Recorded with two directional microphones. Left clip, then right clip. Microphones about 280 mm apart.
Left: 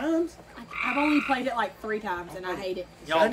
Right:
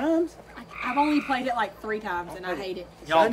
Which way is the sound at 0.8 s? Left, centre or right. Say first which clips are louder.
Right 1 dB; centre.